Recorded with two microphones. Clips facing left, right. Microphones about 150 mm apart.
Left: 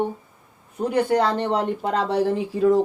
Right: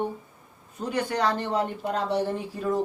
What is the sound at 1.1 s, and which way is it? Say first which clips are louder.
Speech: left 5 dB; 60° left (ahead or behind).